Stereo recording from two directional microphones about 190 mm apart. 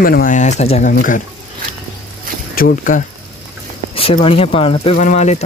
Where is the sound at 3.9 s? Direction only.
30° left (ahead or behind).